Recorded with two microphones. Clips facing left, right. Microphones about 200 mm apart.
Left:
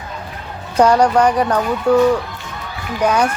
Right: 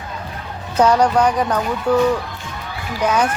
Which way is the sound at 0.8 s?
10° left (ahead or behind).